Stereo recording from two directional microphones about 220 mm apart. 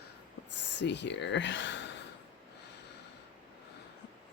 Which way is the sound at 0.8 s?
50° left (ahead or behind).